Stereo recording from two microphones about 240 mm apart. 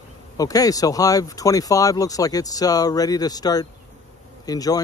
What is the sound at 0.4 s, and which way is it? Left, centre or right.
Speech, centre.